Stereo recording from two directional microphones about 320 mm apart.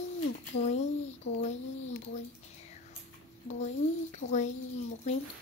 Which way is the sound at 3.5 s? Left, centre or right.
Left.